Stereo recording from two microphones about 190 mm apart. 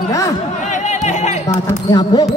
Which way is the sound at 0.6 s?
40° left (ahead or behind).